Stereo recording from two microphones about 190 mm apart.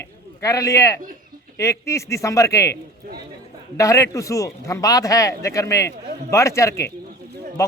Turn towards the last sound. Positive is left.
turn(degrees=15)  # may be behind; listen again after turning